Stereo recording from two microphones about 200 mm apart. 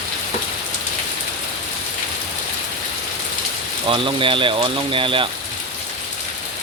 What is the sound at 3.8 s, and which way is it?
Speech, 25° right (ahead or behind).